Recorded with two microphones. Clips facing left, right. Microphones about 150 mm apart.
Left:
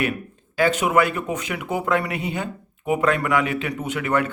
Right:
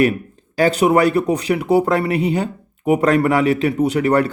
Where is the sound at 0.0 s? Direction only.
35° right (ahead or behind).